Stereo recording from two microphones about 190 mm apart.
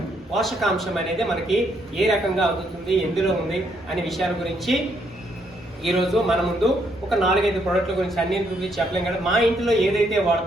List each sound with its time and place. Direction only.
0.3 s a man's voice: centre (ahead or behind)
5.8 s a man's voice: centre (ahead or behind)